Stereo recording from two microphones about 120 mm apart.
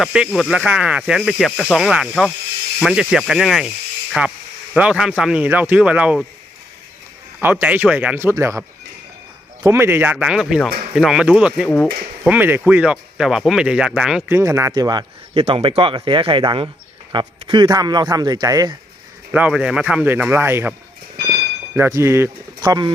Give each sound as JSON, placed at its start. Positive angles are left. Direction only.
{"t": 0.0, "sound": "speech", "side_deg": -5}
{"t": 7.4, "sound": "speech", "side_deg": -15}
{"t": 9.6, "sound": "speech", "side_deg": -20}
{"t": 14.3, "sound": "a man's voice", "side_deg": -20}
{"t": 15.4, "sound": "a man's voice", "side_deg": -55}
{"t": 19.3, "sound": "speech", "side_deg": -10}
{"t": 21.8, "sound": "speech", "side_deg": -25}
{"t": 22.6, "sound": "a man's voice", "side_deg": -35}